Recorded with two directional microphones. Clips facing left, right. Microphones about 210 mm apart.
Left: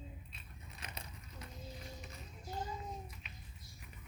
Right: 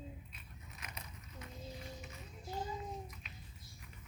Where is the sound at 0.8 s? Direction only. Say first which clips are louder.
Left 2 dB; 30° left (ahead or behind).